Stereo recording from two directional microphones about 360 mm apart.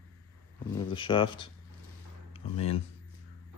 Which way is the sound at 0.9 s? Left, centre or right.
Centre.